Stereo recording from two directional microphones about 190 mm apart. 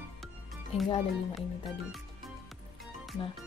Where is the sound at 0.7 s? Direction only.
30° left (ahead or behind).